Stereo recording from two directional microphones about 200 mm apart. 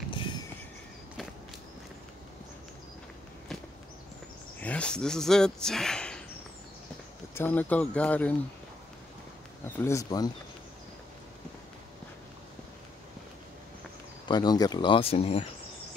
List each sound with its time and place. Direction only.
0.1 s vehicle: 25° left (ahead or behind)
4.6 s speech: 5° left (ahead or behind)
7.3 s speech: 10° left (ahead or behind)
9.8 s speech: 15° left (ahead or behind)
14.2 s speech: 20° left (ahead or behind)